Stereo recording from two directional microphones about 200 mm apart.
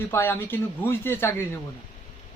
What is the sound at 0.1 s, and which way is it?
Speech, 10° left (ahead or behind).